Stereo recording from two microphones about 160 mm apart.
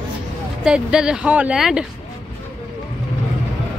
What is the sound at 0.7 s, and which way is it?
Speech, 5° right (ahead or behind).